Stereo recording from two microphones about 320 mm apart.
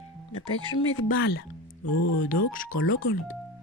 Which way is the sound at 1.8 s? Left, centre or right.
Left.